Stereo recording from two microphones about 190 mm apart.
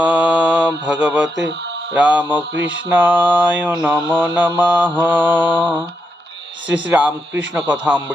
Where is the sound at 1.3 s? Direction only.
70° right (ahead or behind).